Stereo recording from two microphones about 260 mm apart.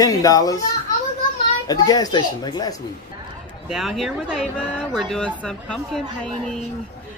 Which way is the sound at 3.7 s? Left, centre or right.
Centre.